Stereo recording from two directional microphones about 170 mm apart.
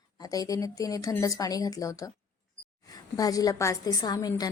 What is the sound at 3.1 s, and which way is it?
A woman's voice, 20° left (ahead or behind).